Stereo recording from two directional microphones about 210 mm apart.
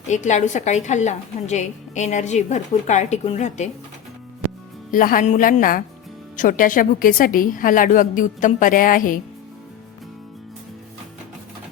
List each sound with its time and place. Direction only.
0.1 s a woman's voice: 35° left (ahead or behind)
4.9 s a woman's voice: 40° left (ahead or behind)